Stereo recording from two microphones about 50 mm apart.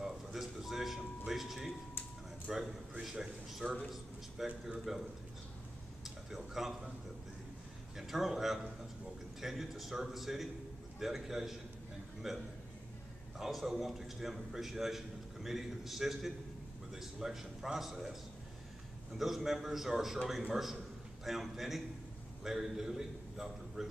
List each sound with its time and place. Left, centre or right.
0.0 s a sound: centre
2.5 s a man's voice: centre
6.0 s speech: centre
8.1 s a man's voice: centre
19.1 s a man's voice: centre